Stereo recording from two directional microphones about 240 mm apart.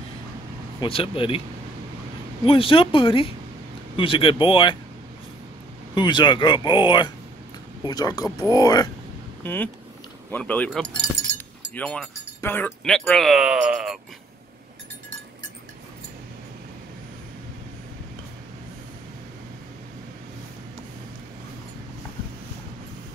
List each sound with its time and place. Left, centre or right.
0.7 s speech: left
2.4 s speech: left
5.9 s speech: centre